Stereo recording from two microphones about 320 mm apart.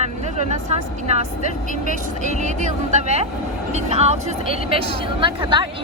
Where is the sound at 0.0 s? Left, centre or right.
Right.